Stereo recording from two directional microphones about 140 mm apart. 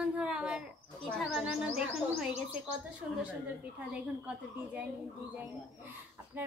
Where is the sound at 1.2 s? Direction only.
Centre (ahead or behind).